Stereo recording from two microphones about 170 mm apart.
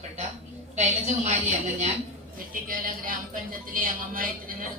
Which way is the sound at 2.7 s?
55° right (ahead or behind).